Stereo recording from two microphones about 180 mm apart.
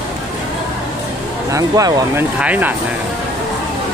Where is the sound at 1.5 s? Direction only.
20° right (ahead or behind).